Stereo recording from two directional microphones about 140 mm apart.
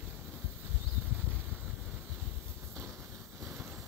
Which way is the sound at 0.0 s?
15° right (ahead or behind).